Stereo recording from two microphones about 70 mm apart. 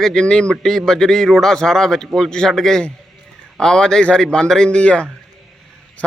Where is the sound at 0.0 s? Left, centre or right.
Centre.